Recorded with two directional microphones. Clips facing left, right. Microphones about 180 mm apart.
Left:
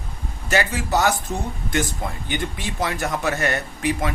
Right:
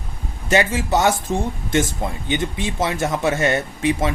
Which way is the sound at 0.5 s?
25° right (ahead or behind).